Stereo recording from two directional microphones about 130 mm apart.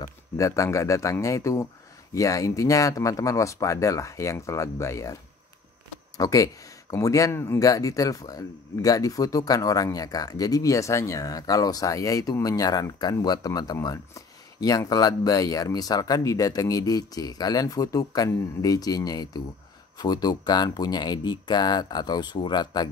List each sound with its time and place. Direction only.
0.0 s speech: 25° left (ahead or behind)
6.1 s speech: 25° left (ahead or behind)